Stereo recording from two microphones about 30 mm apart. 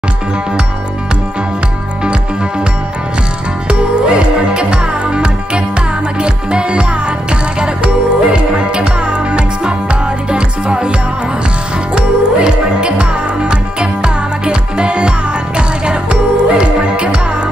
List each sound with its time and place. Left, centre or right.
3.6 s music: right
11.9 s music: right